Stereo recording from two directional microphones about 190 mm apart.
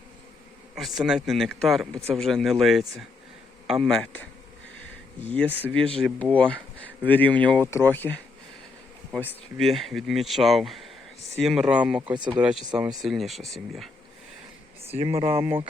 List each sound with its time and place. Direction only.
0.8 s speech: centre (ahead or behind)
5.6 s speech: 5° left (ahead or behind)
12.1 s speech: 25° right (ahead or behind)
12.4 s speech: 5° right (ahead or behind)
14.8 s speech: 30° right (ahead or behind)